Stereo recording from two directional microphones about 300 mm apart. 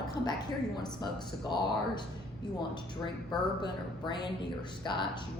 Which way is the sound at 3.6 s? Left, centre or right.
Centre.